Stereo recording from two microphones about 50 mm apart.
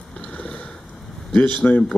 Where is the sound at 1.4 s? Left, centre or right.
Left.